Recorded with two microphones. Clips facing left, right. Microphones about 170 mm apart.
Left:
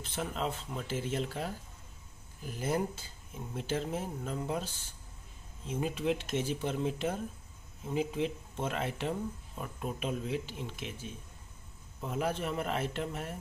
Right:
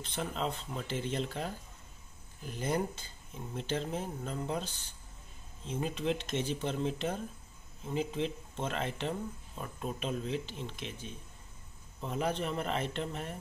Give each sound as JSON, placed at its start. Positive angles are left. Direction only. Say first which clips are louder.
{"t": 0.0, "sound": "speech", "louder": "even", "side_deg": 5}